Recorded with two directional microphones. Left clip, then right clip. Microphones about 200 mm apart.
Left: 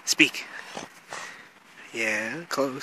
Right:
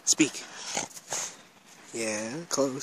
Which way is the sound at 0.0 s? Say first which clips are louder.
Left 5 dB; 10° right (ahead or behind).